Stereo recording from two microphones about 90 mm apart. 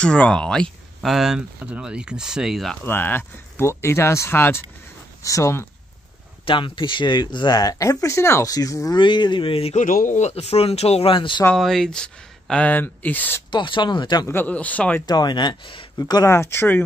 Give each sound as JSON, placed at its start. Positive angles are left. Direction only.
{"t": 0.0, "sound": "speech", "side_deg": 10}
{"t": 1.1, "sound": "speech", "side_deg": -5}
{"t": 2.8, "sound": "speech", "side_deg": 25}
{"t": 6.4, "sound": "speech", "side_deg": 70}
{"t": 8.9, "sound": "speech", "side_deg": 60}
{"t": 11.5, "sound": "speech", "side_deg": 5}
{"t": 13.5, "sound": "speech", "side_deg": 65}
{"t": 14.2, "sound": "speech", "side_deg": 25}
{"t": 15.0, "sound": "speech", "side_deg": 50}
{"t": 16.0, "sound": "speech", "side_deg": 45}
{"t": 16.3, "sound": "speech", "side_deg": 30}